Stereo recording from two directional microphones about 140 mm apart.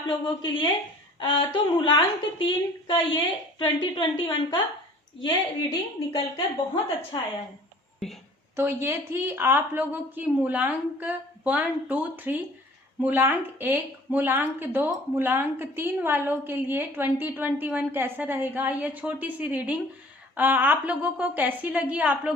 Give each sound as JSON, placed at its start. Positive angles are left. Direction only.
{"t": 0.1, "sound": "a woman's voice", "side_deg": 35}
{"t": 6.1, "sound": "a woman's voice", "side_deg": 40}
{"t": 8.0, "sound": "speech", "side_deg": 5}
{"t": 8.5, "sound": "speech", "side_deg": -20}